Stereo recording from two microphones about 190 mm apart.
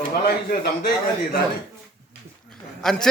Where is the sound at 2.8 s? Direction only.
Centre (ahead or behind).